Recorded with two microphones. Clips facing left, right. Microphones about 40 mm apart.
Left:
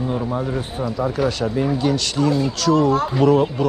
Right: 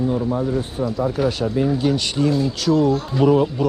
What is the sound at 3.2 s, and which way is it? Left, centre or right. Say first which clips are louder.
Speech: even; centre.